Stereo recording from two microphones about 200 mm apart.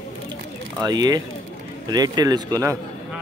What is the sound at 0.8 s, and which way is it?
Speech, 20° right (ahead or behind).